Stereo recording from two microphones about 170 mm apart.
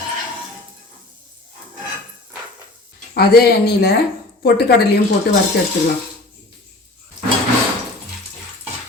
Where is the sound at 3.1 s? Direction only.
65° left (ahead or behind).